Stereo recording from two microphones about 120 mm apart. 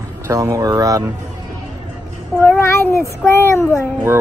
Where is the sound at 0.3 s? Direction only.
25° right (ahead or behind).